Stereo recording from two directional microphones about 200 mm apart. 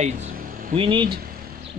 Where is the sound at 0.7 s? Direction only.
25° right (ahead or behind).